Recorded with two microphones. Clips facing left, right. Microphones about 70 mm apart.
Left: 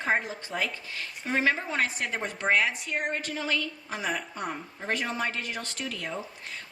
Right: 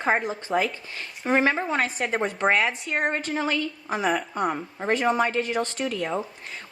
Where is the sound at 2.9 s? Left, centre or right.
Right.